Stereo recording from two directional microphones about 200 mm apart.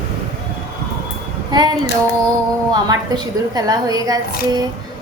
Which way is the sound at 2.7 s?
20° right (ahead or behind).